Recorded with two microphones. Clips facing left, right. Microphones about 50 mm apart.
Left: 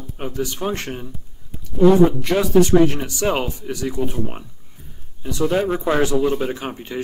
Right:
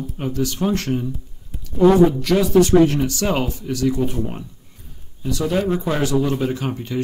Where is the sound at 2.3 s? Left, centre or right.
Left.